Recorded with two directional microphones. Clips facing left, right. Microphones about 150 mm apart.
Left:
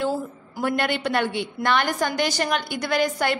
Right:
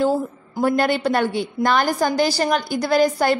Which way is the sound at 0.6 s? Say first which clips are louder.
Right 5 dB; 35° right (ahead or behind).